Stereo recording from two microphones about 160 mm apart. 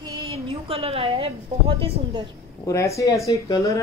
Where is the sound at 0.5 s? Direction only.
35° right (ahead or behind).